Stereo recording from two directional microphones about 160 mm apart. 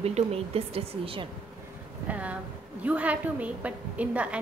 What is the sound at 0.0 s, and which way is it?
Speech, 40° right (ahead or behind).